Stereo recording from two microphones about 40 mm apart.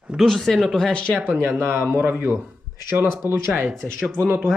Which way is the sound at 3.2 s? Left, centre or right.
Right.